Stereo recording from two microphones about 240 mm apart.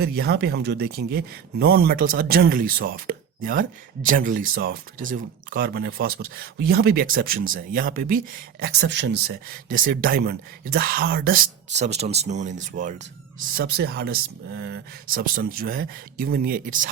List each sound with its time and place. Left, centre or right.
0.0 s speech: right
13.6 s speech: right